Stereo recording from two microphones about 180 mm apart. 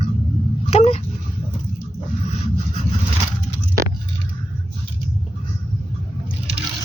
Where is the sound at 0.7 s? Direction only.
35° left (ahead or behind).